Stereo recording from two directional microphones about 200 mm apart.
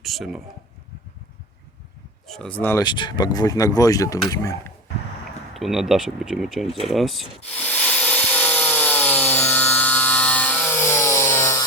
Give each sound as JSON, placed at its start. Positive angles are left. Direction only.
{"t": 0.0, "sound": "speech", "side_deg": 0}
{"t": 2.2, "sound": "speech", "side_deg": 0}
{"t": 5.5, "sound": "speech", "side_deg": 0}
{"t": 6.8, "sound": "wood", "side_deg": 0}